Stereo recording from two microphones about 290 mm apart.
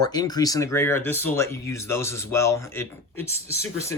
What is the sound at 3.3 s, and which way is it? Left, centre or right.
Speech, right.